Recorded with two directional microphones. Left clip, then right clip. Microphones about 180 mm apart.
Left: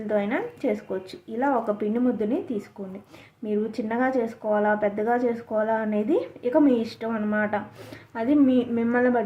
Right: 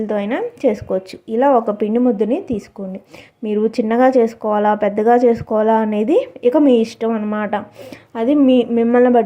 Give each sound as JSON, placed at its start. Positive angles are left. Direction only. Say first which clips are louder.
{"t": 0.1, "sound": "speech", "louder": "right 1 dB", "side_deg": -40}